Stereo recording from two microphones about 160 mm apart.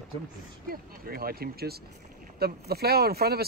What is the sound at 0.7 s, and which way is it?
Speech, 65° right (ahead or behind).